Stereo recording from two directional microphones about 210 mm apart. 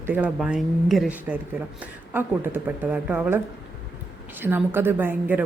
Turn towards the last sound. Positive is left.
turn(degrees=-10)  # may be behind; listen again after turning